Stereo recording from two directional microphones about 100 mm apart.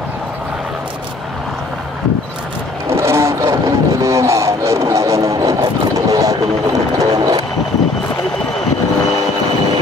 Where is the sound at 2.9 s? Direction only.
25° right (ahead or behind).